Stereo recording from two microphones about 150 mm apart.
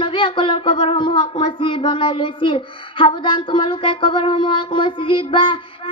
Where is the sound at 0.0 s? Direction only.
35° left (ahead or behind).